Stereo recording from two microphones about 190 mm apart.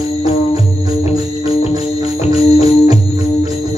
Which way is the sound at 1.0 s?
35° left (ahead or behind).